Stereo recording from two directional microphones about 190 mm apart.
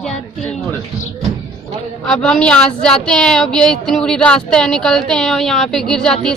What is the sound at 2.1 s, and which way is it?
A woman's voice, 5° left (ahead or behind).